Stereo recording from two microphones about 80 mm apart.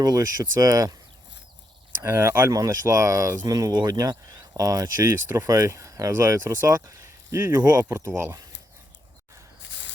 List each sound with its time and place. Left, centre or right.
0.0 s speech: right
2.0 s speech: right
2.5 s speech: right
3.4 s speech: right
7.7 s speech: right
7.9 s speech: right